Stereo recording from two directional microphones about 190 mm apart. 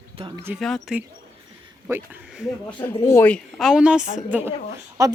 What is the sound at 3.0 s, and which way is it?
Speech, 10° left (ahead or behind).